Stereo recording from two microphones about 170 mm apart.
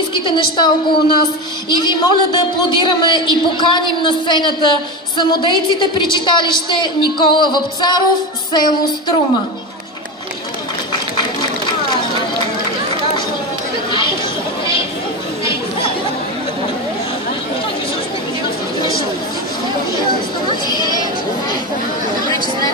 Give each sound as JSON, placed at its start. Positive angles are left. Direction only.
{"t": 0.1, "sound": "a woman's voice", "side_deg": 30}
{"t": 20.4, "sound": "sheep", "side_deg": 25}